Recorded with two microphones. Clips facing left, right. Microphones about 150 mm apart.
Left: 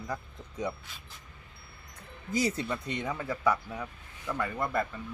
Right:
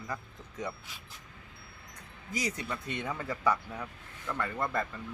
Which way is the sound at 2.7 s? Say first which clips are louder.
Left 2 dB; 15° left (ahead or behind).